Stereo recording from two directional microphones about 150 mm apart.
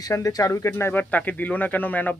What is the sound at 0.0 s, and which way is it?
Speech, 20° left (ahead or behind).